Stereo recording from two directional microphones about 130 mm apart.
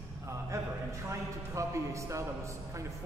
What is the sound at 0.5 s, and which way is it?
A man's voice, 25° right (ahead or behind).